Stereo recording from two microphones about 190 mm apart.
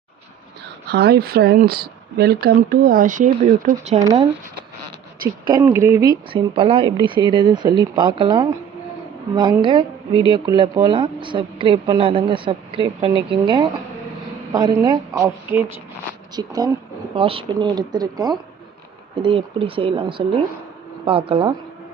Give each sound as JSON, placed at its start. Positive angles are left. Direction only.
{"t": 0.9, "sound": "speech", "side_deg": -55}
{"t": 5.5, "sound": "a woman's voice", "side_deg": -15}